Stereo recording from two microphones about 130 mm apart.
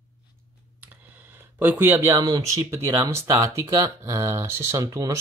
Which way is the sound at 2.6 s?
20° right (ahead or behind).